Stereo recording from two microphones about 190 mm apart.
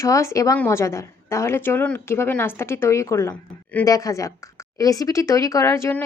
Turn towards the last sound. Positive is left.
turn(degrees=15)  # may be behind; listen again after turning